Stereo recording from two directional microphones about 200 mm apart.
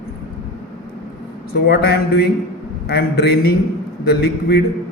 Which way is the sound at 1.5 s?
55° left (ahead or behind).